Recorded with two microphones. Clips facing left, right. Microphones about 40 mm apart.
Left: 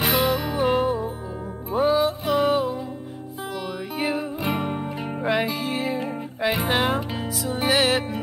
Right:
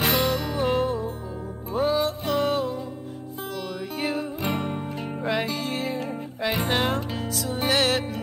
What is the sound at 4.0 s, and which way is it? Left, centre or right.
Music, centre.